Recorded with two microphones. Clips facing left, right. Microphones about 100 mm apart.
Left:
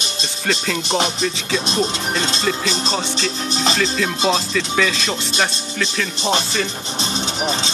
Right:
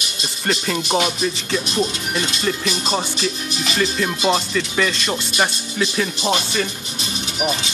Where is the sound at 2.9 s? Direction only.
10° right (ahead or behind).